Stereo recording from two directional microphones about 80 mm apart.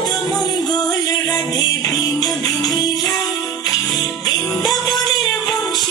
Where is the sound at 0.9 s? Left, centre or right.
Left.